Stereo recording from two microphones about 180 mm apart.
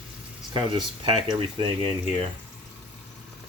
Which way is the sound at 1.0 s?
25° right (ahead or behind).